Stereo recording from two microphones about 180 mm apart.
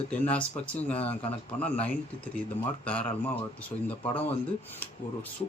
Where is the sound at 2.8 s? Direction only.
5° left (ahead or behind).